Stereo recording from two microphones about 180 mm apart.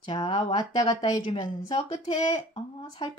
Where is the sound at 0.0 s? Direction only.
25° left (ahead or behind).